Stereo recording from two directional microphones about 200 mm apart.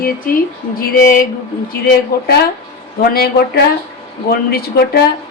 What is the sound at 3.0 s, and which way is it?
A woman's voice, 50° left (ahead or behind).